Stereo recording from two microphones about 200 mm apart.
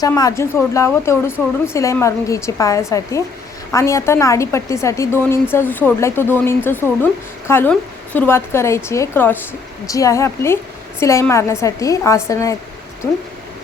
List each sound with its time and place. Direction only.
0.0 s a woman's voice: 15° left (ahead or behind)